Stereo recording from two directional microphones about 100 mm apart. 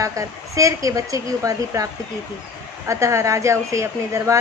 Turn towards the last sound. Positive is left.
turn(degrees=-30)  # may be behind; listen again after turning